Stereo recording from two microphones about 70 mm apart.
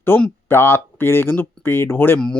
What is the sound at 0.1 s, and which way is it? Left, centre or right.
Speech, left.